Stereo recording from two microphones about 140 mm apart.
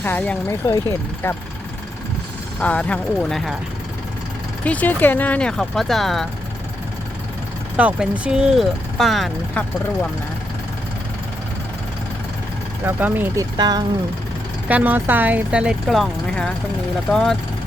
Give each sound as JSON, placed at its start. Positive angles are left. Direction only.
{"t": 0.0, "sound": "speech", "side_deg": 10}
{"t": 2.6, "sound": "speech", "side_deg": 10}
{"t": 4.6, "sound": "speech", "side_deg": 10}
{"t": 7.8, "sound": "speech", "side_deg": -10}
{"t": 12.8, "sound": "speech", "side_deg": -15}
{"t": 13.4, "sound": "speech", "side_deg": -30}
{"t": 14.7, "sound": "speech", "side_deg": -10}